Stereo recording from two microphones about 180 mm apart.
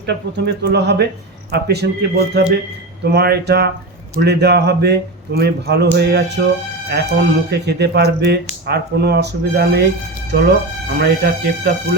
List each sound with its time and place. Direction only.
0.0 s speech: 70° right (ahead or behind)